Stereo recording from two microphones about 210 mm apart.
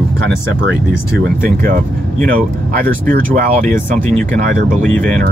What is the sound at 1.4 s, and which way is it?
Speech, 40° right (ahead or behind).